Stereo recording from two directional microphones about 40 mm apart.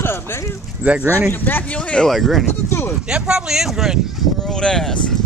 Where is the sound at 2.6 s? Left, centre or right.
Left.